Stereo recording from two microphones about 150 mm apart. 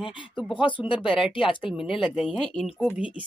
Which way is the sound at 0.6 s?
35° left (ahead or behind).